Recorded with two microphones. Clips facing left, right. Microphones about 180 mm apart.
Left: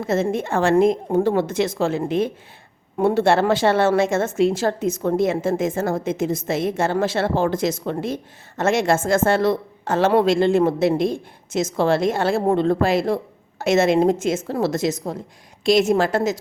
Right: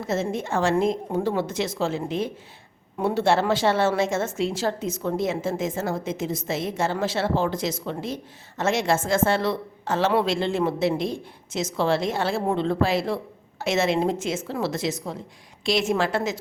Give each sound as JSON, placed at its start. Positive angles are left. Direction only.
{"t": 0.1, "sound": "a woman's voice", "side_deg": 55}